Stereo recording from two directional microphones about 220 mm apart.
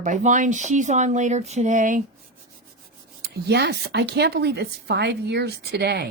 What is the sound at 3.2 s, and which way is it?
A woman's voice, 50° right (ahead or behind).